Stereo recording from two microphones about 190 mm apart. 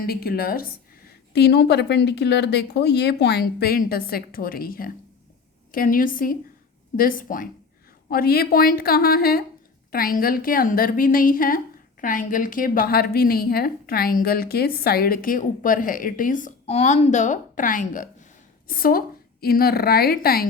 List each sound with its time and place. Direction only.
0.0 s a woman's voice: 55° left (ahead or behind)